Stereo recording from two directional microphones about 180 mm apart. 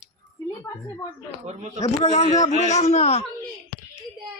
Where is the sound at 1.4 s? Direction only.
40° right (ahead or behind).